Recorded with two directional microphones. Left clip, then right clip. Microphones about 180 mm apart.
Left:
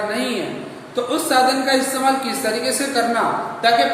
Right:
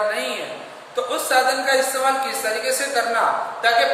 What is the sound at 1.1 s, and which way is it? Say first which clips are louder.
A woman's voice: left 2 dB; 20° left (ahead or behind).